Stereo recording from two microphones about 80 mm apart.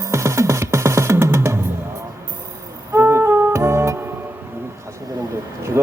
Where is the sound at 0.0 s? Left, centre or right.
Right.